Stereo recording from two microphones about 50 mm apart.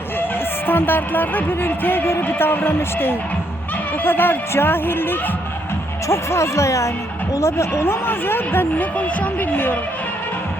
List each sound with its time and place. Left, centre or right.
0.7 s music: left
2.2 s speech: left
6.1 s speech: left
7.3 s speech: left
9.0 s speech: left